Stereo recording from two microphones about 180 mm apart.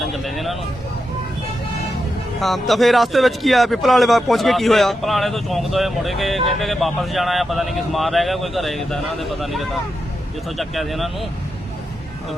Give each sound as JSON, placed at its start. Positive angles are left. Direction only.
{"t": 0.0, "sound": "vehicle", "side_deg": 0}
{"t": 2.4, "sound": "speech", "side_deg": 0}